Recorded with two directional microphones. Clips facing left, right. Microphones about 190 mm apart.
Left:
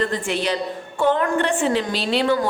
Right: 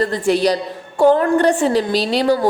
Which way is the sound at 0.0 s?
35° right (ahead or behind).